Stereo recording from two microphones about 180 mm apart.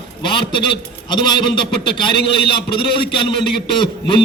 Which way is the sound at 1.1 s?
25° left (ahead or behind).